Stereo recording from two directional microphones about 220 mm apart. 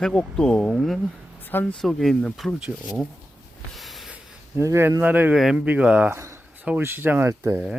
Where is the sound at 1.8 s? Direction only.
Centre (ahead or behind).